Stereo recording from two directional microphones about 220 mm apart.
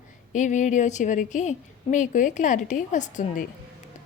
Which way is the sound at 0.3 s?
35° left (ahead or behind).